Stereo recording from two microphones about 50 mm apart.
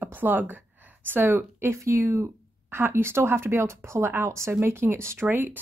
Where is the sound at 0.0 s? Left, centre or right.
Right.